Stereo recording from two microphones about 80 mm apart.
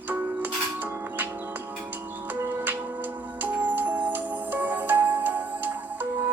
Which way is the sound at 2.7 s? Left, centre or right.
Right.